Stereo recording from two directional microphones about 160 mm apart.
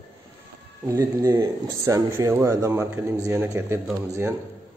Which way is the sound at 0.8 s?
20° right (ahead or behind).